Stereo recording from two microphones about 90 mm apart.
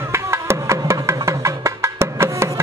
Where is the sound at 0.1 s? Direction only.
30° right (ahead or behind).